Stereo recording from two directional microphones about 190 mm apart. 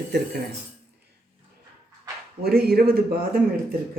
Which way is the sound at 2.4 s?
55° right (ahead or behind).